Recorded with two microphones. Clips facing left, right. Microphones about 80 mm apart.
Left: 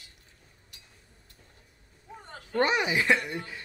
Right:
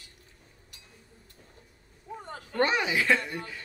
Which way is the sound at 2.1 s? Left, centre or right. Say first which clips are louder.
Right 6 dB; centre.